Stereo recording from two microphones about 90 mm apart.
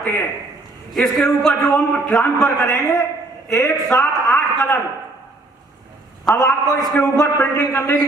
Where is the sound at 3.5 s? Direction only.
35° left (ahead or behind).